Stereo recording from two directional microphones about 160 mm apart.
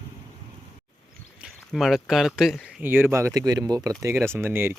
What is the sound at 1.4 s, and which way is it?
Speech, centre (ahead or behind).